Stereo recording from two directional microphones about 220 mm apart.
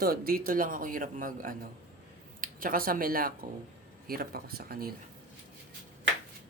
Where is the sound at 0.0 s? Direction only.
40° right (ahead or behind).